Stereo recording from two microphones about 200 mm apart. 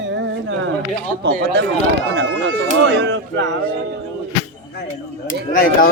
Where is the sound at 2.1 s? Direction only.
65° right (ahead or behind).